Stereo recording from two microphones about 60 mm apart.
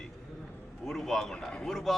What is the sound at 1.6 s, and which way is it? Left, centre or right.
Speech, centre.